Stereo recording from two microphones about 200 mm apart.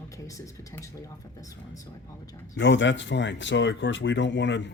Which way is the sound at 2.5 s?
65° left (ahead or behind).